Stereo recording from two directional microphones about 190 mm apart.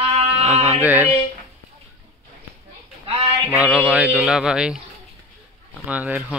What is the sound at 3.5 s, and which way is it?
Speech, 5° right (ahead or behind).